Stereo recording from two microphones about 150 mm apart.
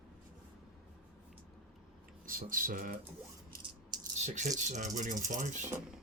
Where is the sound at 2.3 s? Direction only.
65° right (ahead or behind).